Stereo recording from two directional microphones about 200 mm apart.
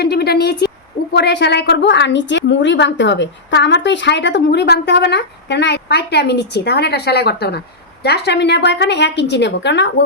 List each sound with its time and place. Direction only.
0.0 s a woman's voice: 50° left (ahead or behind)